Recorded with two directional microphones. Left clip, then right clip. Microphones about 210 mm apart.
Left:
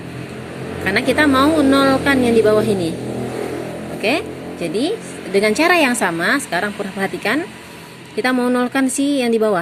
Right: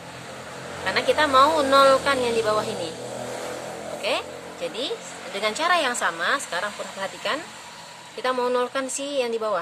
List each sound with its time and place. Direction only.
0.9 s speech: 15° left (ahead or behind)
4.0 s speech: 20° left (ahead or behind)
5.3 s a woman's voice: 15° left (ahead or behind)